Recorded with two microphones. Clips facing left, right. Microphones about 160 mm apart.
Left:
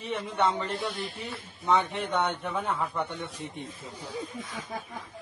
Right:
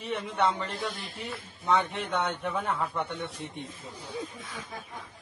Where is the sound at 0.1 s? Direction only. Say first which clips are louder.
Even; 5° left (ahead or behind).